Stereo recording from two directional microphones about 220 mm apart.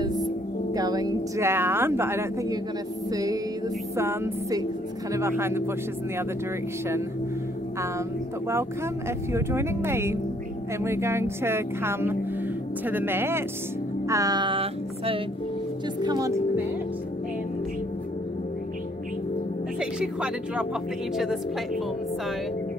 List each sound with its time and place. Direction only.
0.7 s a woman's voice: 15° right (ahead or behind)
9.3 s a woman's voice: 10° right (ahead or behind)
14.0 s music: 15° right (ahead or behind)
16.0 s a woman's voice: 15° right (ahead or behind)
19.8 s speech: 5° right (ahead or behind)